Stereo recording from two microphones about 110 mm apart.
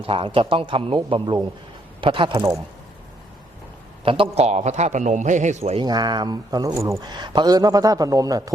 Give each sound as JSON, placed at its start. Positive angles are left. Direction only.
{"t": 0.0, "sound": "a man's voice", "side_deg": -55}
{"t": 4.0, "sound": "a man's voice", "side_deg": -55}
{"t": 4.4, "sound": "a man's voice", "side_deg": -90}
{"t": 5.8, "sound": "a man's voice", "side_deg": -40}
{"t": 7.0, "sound": "a man's voice", "side_deg": -40}